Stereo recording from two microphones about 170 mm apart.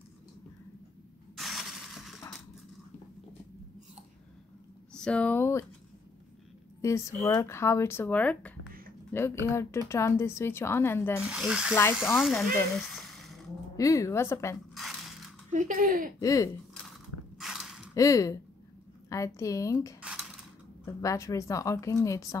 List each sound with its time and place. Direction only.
1.3 s shatter: centre (ahead or behind)
4.9 s speech: 5° left (ahead or behind)
6.8 s a woman's voice: 15° left (ahead or behind)
11.2 s speech: 5° right (ahead or behind)
12.7 s a sound: centre (ahead or behind)
13.7 s a woman's voice: 20° left (ahead or behind)
14.7 s dishes: centre (ahead or behind)
15.5 s speech: 50° right (ahead or behind)
16.2 s a woman's voice: 20° left (ahead or behind)
17.4 s mechanisms: centre (ahead or behind)
17.9 s a woman's voice: 20° left (ahead or behind)